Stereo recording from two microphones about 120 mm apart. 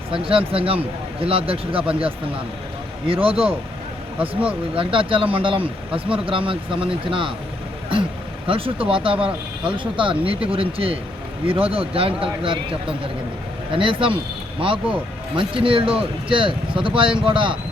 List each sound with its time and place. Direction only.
0.1 s speech: 45° right (ahead or behind)
3.1 s speech: 50° right (ahead or behind)
4.2 s speech: 10° right (ahead or behind)
4.7 s speech: 45° right (ahead or behind)
8.4 s speech: 50° right (ahead or behind)